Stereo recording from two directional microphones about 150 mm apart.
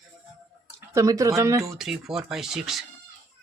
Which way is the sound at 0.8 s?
20° right (ahead or behind).